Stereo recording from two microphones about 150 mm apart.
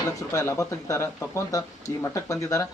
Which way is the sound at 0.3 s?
20° left (ahead or behind).